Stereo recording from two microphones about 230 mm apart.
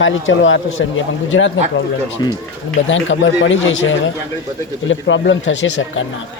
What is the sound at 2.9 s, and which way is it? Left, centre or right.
Speech, left.